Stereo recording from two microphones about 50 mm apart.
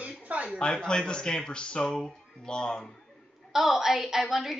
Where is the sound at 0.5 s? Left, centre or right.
Centre.